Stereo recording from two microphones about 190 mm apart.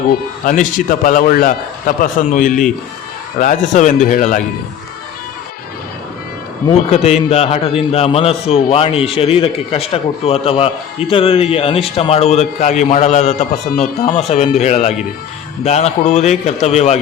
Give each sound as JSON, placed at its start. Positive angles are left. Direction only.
{"t": 0.1, "sound": "a man's voice", "side_deg": 45}
{"t": 6.7, "sound": "a man's voice", "side_deg": 35}